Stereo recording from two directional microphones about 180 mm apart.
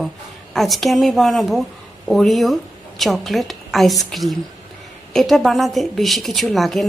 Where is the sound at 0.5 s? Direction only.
Centre (ahead or behind).